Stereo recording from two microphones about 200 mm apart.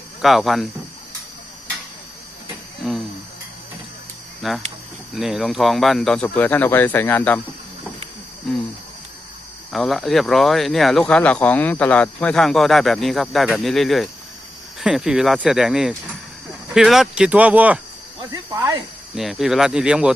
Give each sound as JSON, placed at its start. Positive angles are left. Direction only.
{"t": 0.2, "sound": "speech", "side_deg": 0}
{"t": 2.8, "sound": "a sound", "side_deg": 0}
{"t": 4.4, "sound": "speech", "side_deg": 0}
{"t": 8.4, "sound": "speech", "side_deg": 0}
{"t": 9.7, "sound": "speech", "side_deg": 0}
{"t": 18.3, "sound": "snake", "side_deg": -15}
{"t": 19.1, "sound": "speech", "side_deg": 0}